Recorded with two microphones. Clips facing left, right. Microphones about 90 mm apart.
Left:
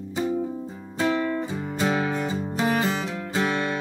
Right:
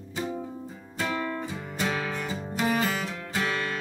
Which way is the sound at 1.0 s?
20° left (ahead or behind).